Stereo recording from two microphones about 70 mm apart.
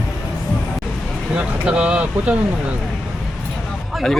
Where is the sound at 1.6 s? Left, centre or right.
Centre.